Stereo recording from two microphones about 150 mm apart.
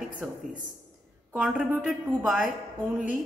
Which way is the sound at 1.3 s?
10° right (ahead or behind).